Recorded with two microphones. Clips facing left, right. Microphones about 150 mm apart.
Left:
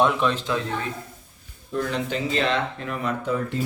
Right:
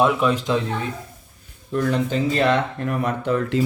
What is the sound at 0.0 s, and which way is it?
Speech, 10° right (ahead or behind).